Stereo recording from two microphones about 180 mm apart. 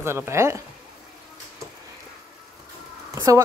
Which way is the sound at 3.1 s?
20° right (ahead or behind).